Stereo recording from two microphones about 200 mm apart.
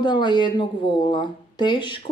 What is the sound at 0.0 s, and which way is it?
Speech, 20° left (ahead or behind).